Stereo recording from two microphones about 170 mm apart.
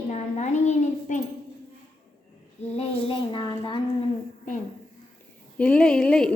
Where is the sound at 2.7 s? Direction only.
30° left (ahead or behind).